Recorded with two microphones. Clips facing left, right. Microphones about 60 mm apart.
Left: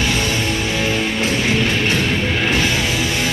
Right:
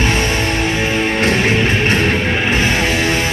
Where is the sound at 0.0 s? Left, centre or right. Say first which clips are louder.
Right 3 dB; right.